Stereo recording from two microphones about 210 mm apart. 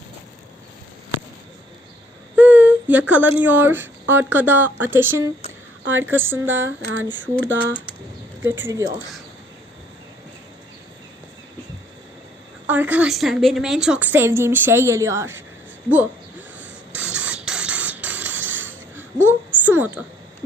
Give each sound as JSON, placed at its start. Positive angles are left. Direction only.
{"t": 2.3, "sound": "speech", "side_deg": -5}
{"t": 5.8, "sound": "a woman's voice", "side_deg": -65}
{"t": 6.1, "sound": "a woman's voice", "side_deg": -10}
{"t": 6.5, "sound": "a sound", "side_deg": -65}
{"t": 8.4, "sound": "a woman's voice", "side_deg": -10}
{"t": 12.6, "sound": "a woman's voice", "side_deg": -5}
{"t": 16.6, "sound": "music", "side_deg": -5}